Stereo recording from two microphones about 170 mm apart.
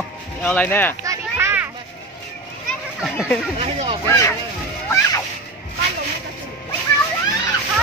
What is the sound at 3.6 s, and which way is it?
Speech, 35° right (ahead or behind).